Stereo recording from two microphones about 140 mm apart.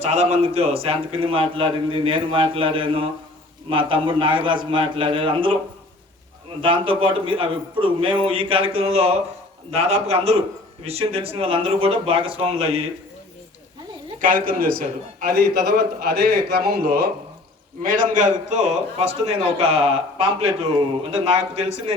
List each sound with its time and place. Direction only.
0.0 s a man's voice: 50° right (ahead or behind)
6.6 s a man's voice: 40° right (ahead or behind)
14.2 s a man's voice: 85° right
17.8 s a man's voice: 75° right (ahead or behind); by 21.9 s 50° right (ahead or behind)